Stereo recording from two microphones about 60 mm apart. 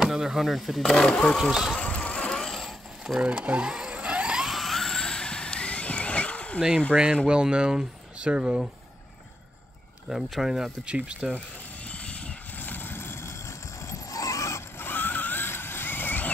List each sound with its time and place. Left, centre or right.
0.0 s speech: centre
1.3 s speech: centre
1.8 s vehicle: centre
3.2 s speech: centre
3.7 s vehicle: centre
4.5 s vehicle: centre; by 6.6 s left
6.9 s speech: centre
10.0 s speech: centre
11.9 s vehicle: left
13.8 s vehicle: left
14.8 s vehicle: left